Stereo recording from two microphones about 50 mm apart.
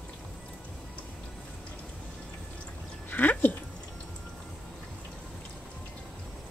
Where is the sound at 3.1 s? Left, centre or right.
Left.